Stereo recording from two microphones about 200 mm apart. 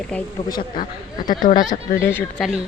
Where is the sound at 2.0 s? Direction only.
10° left (ahead or behind).